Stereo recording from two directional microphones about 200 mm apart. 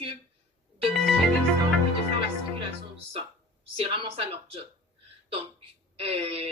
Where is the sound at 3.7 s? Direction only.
25° right (ahead or behind).